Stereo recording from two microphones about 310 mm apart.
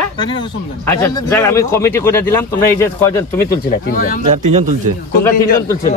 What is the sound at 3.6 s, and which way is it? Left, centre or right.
Speech, left.